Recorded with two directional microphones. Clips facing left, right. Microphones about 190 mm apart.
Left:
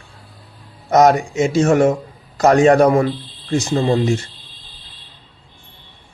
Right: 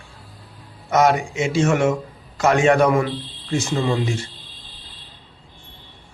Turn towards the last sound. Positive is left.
turn(degrees=40)  # may be behind; listen again after turning